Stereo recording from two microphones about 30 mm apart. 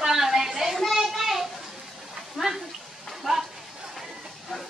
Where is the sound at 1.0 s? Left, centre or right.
Centre.